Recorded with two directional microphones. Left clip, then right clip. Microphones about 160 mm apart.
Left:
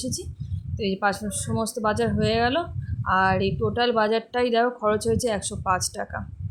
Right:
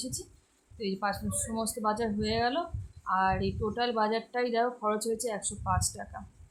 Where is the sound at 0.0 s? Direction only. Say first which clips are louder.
Left 8 dB; 30° left (ahead or behind).